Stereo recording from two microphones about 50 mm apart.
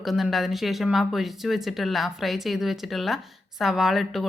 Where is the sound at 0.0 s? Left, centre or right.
Centre.